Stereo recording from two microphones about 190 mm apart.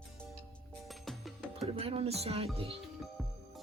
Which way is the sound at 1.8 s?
30° right (ahead or behind).